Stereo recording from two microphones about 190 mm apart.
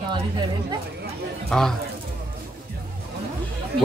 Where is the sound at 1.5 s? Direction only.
Centre (ahead or behind).